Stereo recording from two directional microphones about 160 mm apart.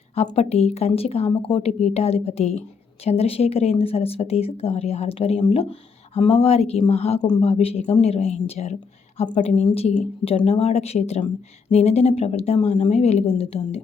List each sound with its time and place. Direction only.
0.3 s speech: 40° left (ahead or behind)
7.2 s speech: 25° left (ahead or behind)
7.4 s a woman's voice: 40° left (ahead or behind)